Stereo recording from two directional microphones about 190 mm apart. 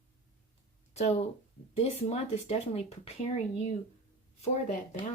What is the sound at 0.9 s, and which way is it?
Speech, 35° left (ahead or behind).